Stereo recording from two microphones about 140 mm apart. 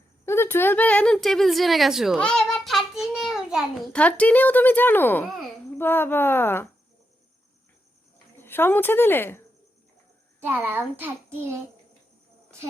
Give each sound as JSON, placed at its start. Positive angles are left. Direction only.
{"t": 0.3, "sound": "a child's voice", "side_deg": 15}
{"t": 3.9, "sound": "speech", "side_deg": 10}
{"t": 8.4, "sound": "speech", "side_deg": 15}
{"t": 10.5, "sound": "a child's voice", "side_deg": -10}